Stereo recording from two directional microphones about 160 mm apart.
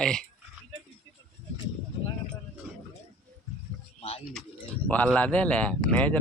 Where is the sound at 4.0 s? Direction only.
40° left (ahead or behind).